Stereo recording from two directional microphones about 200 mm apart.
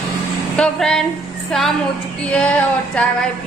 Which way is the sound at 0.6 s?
5° left (ahead or behind).